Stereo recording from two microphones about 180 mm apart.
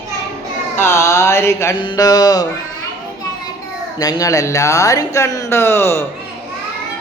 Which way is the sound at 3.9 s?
20° left (ahead or behind).